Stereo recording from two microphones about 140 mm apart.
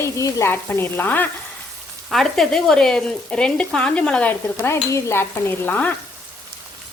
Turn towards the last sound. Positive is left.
turn(degrees=15)  # may be behind; listen again after turning